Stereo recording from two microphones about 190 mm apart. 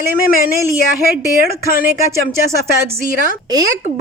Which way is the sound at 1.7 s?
45° left (ahead or behind).